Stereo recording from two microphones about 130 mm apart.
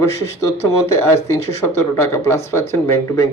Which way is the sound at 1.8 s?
20° left (ahead or behind).